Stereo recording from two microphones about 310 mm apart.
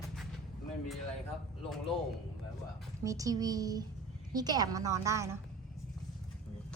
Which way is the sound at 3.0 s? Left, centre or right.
Centre.